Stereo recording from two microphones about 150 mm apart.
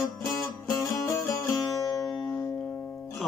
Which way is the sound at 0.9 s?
25° left (ahead or behind).